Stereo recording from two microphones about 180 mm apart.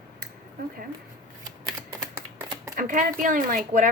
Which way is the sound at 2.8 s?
45° right (ahead or behind).